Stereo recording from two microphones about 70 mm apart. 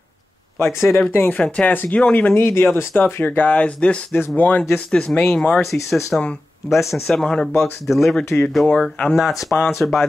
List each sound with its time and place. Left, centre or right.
0.6 s speech: left
1.1 s speech: left
2.3 s speech: left
3.4 s speech: centre
7.1 s speech: centre
9.4 s speech: centre